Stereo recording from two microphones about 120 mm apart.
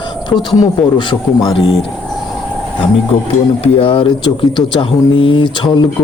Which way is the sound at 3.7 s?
50° left (ahead or behind).